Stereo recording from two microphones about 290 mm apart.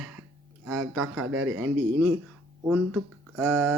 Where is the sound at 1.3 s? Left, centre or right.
Right.